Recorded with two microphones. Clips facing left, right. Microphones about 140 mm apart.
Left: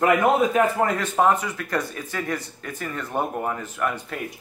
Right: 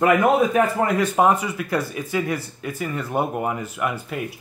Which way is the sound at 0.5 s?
10° right (ahead or behind).